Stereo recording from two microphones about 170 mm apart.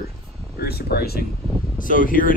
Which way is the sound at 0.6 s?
70° left (ahead or behind).